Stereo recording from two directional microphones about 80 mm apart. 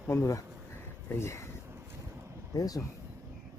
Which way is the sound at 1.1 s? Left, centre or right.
Left.